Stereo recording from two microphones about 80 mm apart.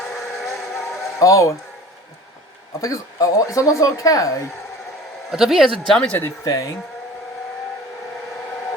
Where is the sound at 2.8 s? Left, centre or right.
Left.